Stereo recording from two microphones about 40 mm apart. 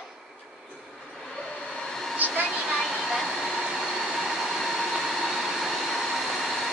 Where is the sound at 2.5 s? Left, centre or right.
Centre.